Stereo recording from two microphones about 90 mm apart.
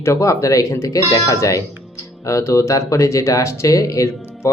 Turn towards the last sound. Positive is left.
turn(degrees=35)  # may be behind; listen again after turning